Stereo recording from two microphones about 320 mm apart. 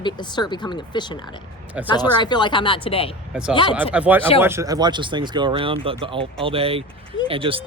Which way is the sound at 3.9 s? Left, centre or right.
Centre.